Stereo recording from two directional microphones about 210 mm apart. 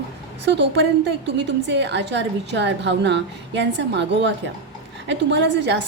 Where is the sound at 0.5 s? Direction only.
55° right (ahead or behind).